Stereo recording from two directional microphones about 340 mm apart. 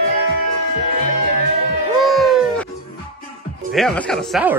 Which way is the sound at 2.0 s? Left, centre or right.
Centre.